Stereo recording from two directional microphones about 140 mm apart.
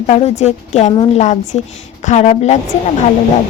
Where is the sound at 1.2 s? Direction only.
55° left (ahead or behind).